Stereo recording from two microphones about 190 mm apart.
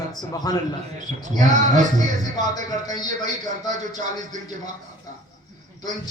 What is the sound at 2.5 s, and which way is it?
Speech, 20° left (ahead or behind).